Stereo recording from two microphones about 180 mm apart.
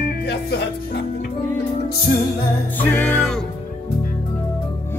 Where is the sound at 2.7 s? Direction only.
10° left (ahead or behind).